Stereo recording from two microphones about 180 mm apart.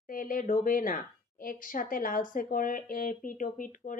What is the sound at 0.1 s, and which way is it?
Speech, 50° left (ahead or behind).